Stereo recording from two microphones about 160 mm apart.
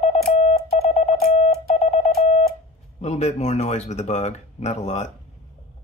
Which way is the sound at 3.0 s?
45° left (ahead or behind).